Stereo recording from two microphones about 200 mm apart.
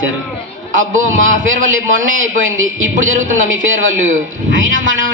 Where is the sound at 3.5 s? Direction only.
75° right (ahead or behind).